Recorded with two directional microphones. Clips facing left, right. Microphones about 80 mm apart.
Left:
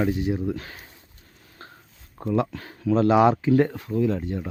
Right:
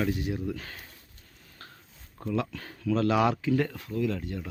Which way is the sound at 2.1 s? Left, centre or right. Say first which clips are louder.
Left 6 dB; left.